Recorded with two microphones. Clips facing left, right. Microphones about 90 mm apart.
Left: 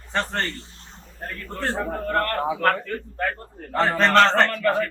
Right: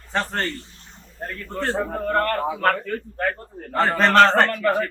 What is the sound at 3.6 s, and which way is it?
A man's voice, 5° right (ahead or behind).